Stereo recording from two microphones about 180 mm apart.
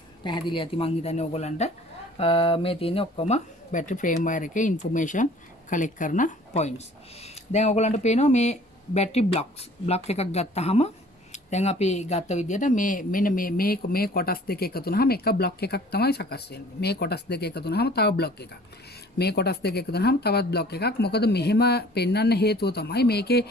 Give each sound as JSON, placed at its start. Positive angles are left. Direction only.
{"t": 0.2, "sound": "speech", "side_deg": 25}